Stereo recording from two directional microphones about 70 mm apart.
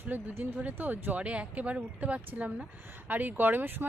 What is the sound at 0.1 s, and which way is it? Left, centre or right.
Speech, right.